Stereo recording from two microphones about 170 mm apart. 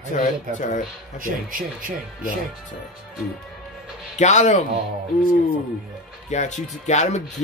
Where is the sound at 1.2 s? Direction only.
55° right (ahead or behind).